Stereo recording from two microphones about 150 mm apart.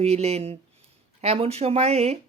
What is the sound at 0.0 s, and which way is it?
A woman's voice, 45° right (ahead or behind).